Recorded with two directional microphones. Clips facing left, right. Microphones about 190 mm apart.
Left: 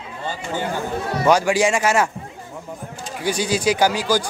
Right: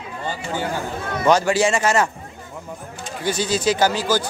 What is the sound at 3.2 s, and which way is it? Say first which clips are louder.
Speech: left 1 dB; 10° left (ahead or behind).